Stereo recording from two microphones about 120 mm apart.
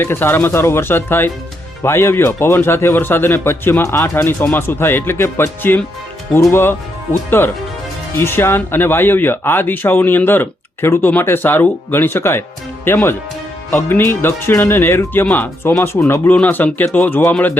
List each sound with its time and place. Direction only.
0.0 s speech: 20° left (ahead or behind)